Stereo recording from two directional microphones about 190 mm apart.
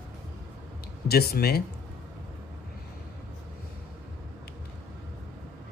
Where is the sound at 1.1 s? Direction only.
55° left (ahead or behind).